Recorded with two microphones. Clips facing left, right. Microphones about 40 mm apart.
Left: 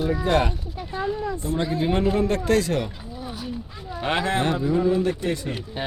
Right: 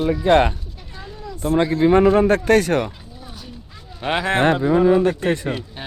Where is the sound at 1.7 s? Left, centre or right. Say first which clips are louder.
Right 9 dB; right.